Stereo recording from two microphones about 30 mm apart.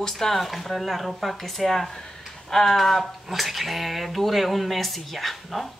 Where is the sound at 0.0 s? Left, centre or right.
Centre.